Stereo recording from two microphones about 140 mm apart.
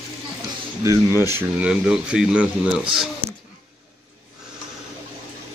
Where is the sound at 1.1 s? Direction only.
25° left (ahead or behind).